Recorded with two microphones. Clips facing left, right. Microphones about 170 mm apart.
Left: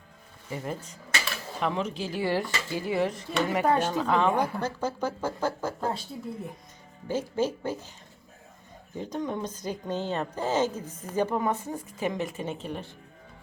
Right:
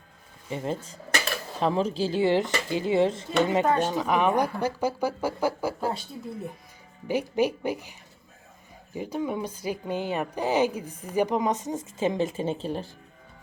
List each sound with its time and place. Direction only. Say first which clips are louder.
0.5 s speech: right 4 dB; 25° right (ahead or behind)
3.8 s speech: right 1 dB; 15° right (ahead or behind)
7.1 s speech: right 3 dB; 15° right (ahead or behind)
9.0 s speech: right 2 dB; 10° right (ahead or behind); by 12.9 s 30° right (ahead or behind)